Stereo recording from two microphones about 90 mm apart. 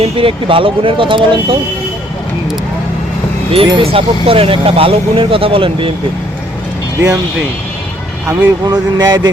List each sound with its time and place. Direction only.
0.0 s speech: 90° right; by 1.5 s 65° right (ahead or behind)
3.7 s speech: 75° right (ahead or behind)
8.3 s speech: 45° right (ahead or behind)